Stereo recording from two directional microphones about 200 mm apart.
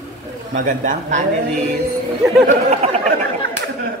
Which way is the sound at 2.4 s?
35° right (ahead or behind).